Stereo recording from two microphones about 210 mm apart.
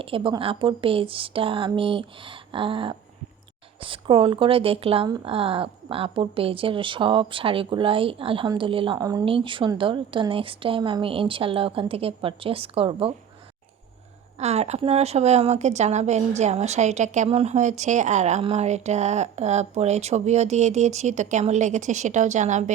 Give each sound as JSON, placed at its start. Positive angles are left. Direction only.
{"t": 0.0, "sound": "speech", "side_deg": -25}
{"t": 14.3, "sound": "a woman's voice", "side_deg": -30}